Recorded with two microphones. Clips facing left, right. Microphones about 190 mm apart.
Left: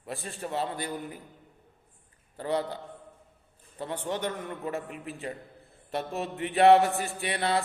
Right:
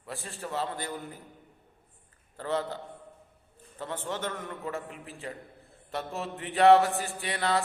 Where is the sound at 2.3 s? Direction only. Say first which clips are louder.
Left 2 dB; 15° left (ahead or behind).